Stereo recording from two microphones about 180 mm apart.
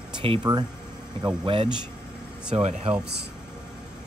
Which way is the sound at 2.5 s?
35° right (ahead or behind).